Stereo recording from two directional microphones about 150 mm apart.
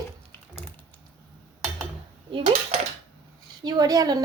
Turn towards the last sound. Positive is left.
turn(degrees=-25)  # may be behind; listen again after turning